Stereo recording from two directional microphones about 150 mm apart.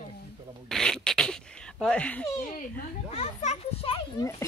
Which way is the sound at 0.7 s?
5° left (ahead or behind).